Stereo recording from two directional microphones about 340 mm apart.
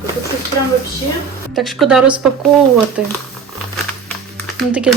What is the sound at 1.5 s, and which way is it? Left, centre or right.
Speech, centre.